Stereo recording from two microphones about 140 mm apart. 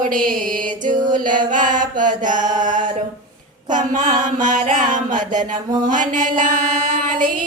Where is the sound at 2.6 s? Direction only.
65° right (ahead or behind).